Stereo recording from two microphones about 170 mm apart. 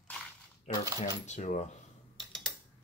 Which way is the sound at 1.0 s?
45° left (ahead or behind).